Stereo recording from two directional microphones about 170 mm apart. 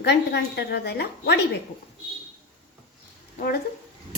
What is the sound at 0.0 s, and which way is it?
A woman's voice, 75° left (ahead or behind).